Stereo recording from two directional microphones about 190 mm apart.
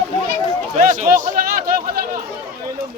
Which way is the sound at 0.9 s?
45° right (ahead or behind).